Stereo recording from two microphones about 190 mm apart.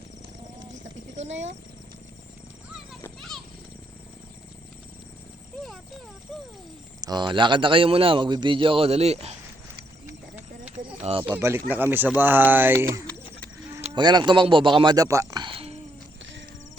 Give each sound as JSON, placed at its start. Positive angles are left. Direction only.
{"t": 1.2, "sound": "speech", "side_deg": -35}
{"t": 3.2, "sound": "a sound", "side_deg": 0}
{"t": 7.0, "sound": "a man's voice", "side_deg": -20}
{"t": 10.1, "sound": "a sound", "side_deg": -10}
{"t": 11.0, "sound": "speech", "side_deg": -30}
{"t": 11.3, "sound": "speech", "side_deg": -10}